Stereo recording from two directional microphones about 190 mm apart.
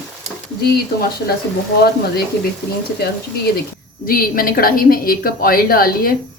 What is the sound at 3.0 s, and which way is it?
A woman's voice, 55° left (ahead or behind).